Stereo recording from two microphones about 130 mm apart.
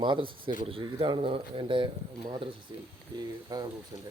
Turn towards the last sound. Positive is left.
turn(degrees=-30)  # may be behind; listen again after turning